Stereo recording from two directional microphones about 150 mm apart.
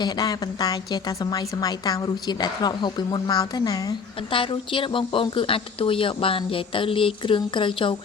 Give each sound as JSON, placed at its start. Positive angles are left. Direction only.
{"t": 0.0, "sound": "a woman's voice", "side_deg": 25}